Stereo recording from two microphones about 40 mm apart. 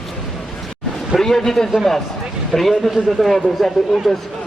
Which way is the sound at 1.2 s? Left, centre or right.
Centre.